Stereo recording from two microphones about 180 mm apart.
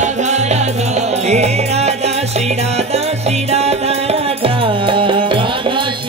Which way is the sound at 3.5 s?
35° right (ahead or behind).